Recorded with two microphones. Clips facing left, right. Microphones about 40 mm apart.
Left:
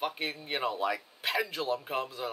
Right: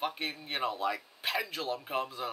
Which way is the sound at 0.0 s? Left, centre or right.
Centre.